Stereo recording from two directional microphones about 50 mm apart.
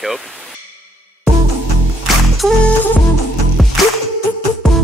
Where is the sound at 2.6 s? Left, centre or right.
Left.